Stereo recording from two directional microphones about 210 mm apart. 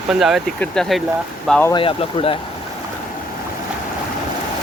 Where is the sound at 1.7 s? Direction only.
25° left (ahead or behind).